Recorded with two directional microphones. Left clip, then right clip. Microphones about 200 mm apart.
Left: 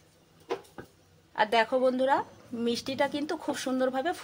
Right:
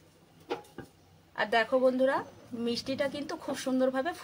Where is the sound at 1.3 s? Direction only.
35° left (ahead or behind).